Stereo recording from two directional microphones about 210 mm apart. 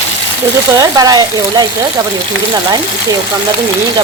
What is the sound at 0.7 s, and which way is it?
Speech, 20° right (ahead or behind).